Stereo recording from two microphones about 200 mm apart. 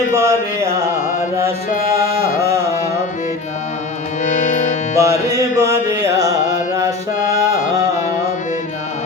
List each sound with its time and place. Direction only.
0.1 s music: 15° right (ahead or behind)
4.2 s music: 35° left (ahead or behind)
4.9 s music: 15° right (ahead or behind)
7.5 s music: 40° left (ahead or behind)